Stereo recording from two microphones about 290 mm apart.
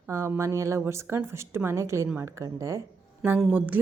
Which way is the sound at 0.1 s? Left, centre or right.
Centre.